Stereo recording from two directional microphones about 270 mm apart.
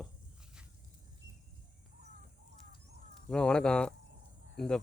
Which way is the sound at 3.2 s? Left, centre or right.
Centre.